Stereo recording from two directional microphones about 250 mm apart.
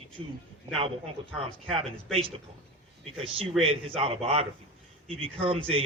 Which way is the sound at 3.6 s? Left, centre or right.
Right.